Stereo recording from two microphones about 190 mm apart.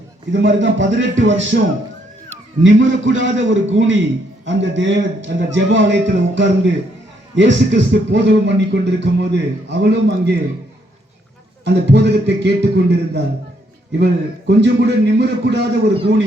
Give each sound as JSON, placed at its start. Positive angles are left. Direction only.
{"t": 0.4, "sound": "speech", "side_deg": -75}
{"t": 2.6, "sound": "a man's voice", "side_deg": -80}
{"t": 11.6, "sound": "a man's voice", "side_deg": -65}